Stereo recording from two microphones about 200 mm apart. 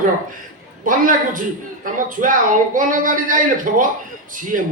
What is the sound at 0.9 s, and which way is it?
A woman's voice, 40° right (ahead or behind).